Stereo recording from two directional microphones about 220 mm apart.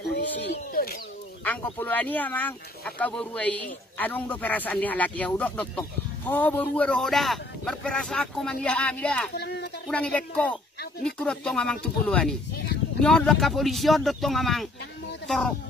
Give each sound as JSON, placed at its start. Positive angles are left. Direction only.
{"t": 0.0, "sound": "a sound", "side_deg": 50}
{"t": 1.4, "sound": "speech", "side_deg": 10}
{"t": 9.3, "sound": "speech", "side_deg": 50}
{"t": 9.8, "sound": "speech", "side_deg": 5}